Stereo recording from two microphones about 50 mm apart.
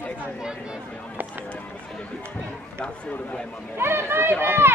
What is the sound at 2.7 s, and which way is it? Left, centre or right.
Speech, left.